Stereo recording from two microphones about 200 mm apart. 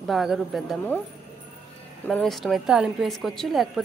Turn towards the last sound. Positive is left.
turn(degrees=0)  # may be behind; listen again after turning